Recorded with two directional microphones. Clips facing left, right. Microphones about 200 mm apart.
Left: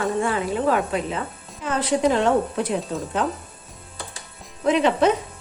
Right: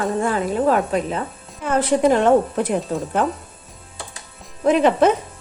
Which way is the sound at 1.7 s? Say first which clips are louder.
Right 4 dB; 50° right (ahead or behind).